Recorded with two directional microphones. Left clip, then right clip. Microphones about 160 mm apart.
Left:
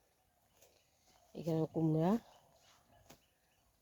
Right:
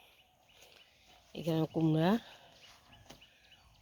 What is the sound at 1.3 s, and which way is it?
Speech, 5° right (ahead or behind).